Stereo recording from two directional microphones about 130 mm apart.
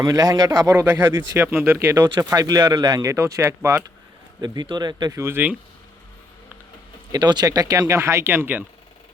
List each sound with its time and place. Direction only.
0.0 s speech: 25° right (ahead or behind)
0.7 s speech: 15° right (ahead or behind); by 5.2 s 30° right (ahead or behind)
5.2 s speech: 15° right (ahead or behind)
7.1 s speech: 35° right (ahead or behind); by 8.6 s 15° right (ahead or behind)